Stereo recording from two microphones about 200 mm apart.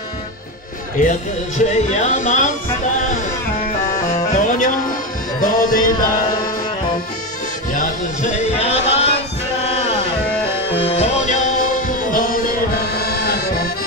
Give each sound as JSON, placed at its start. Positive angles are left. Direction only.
{"t": 1.0, "sound": "speech", "side_deg": 45}
{"t": 4.3, "sound": "music", "side_deg": 40}
{"t": 7.7, "sound": "music", "side_deg": 40}
{"t": 10.8, "sound": "music", "side_deg": 35}